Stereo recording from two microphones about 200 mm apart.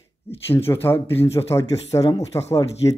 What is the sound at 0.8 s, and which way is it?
Speech, 10° left (ahead or behind).